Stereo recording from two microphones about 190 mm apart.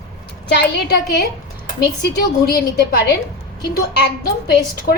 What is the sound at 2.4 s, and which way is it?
A woman's voice, 50° left (ahead or behind).